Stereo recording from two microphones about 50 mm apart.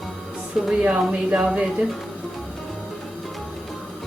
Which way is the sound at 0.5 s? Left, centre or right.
Centre.